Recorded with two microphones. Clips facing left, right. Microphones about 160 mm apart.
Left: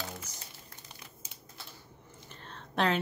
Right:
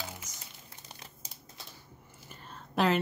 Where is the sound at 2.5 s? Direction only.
5° right (ahead or behind).